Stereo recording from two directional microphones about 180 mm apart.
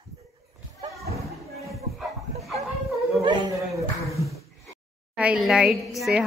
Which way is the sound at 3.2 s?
25° right (ahead or behind).